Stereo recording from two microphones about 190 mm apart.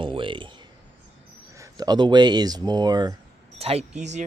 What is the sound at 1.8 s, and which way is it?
Speech, 20° right (ahead or behind).